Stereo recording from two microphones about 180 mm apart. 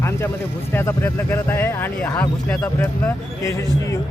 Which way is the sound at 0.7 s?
15° left (ahead or behind).